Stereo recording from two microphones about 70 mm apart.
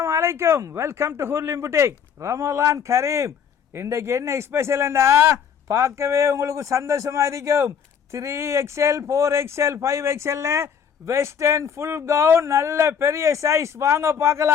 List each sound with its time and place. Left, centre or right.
0.0 s speech: right